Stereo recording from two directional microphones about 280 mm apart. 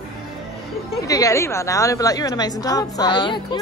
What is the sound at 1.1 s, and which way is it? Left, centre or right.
A woman's voice, centre.